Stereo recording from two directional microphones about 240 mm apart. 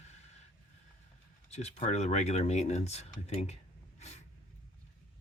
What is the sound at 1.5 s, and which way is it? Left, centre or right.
Speech, left.